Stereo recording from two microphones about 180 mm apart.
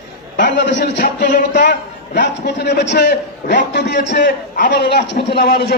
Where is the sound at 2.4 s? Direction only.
70° left (ahead or behind).